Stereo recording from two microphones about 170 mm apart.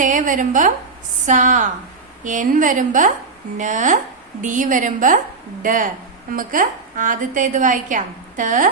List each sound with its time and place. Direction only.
0.0 s a woman's voice: 50° right (ahead or behind)